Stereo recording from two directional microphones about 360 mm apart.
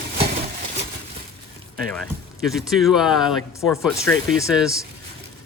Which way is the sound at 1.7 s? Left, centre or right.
Centre.